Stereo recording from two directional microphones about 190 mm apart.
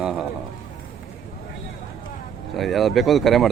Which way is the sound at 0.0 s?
5° right (ahead or behind).